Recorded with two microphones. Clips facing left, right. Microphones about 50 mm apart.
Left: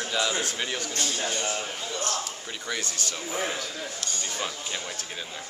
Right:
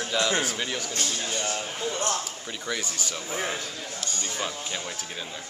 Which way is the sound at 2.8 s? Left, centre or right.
Centre.